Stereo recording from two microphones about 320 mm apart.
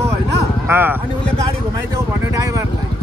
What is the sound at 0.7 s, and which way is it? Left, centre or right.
Speech, centre.